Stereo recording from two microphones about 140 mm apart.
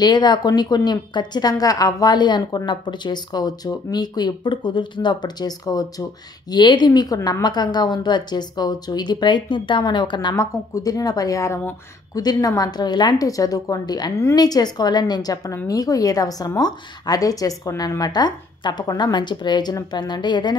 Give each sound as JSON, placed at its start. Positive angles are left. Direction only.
{"t": 0.0, "sound": "a woman's voice", "side_deg": 30}